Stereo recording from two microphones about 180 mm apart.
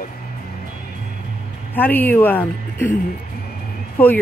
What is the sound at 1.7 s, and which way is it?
A woman's voice, 10° left (ahead or behind).